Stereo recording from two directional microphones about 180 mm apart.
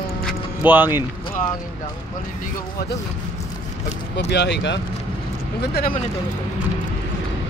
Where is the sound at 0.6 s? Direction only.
10° right (ahead or behind).